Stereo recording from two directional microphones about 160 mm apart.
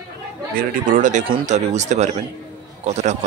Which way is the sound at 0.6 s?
55° right (ahead or behind).